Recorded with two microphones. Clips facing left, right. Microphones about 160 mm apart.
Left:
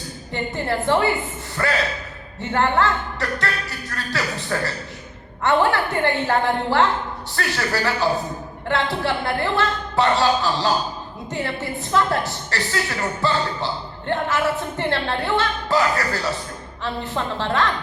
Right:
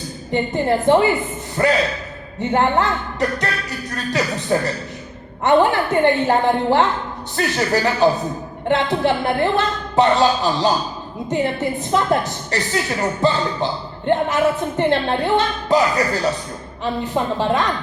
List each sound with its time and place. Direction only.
0.3 s a man's voice: 15° right (ahead or behind)